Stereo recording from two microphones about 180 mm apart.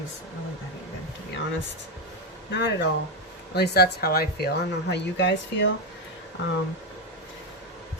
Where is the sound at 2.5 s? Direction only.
70° left (ahead or behind); by 5.7 s 90° left.